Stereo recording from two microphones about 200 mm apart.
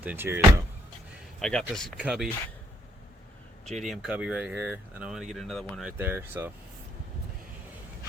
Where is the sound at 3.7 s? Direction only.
Centre (ahead or behind).